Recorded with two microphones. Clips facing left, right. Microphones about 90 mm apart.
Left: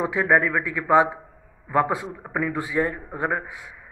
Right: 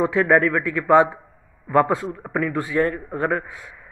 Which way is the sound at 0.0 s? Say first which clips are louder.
Right 3 dB; 10° left (ahead or behind).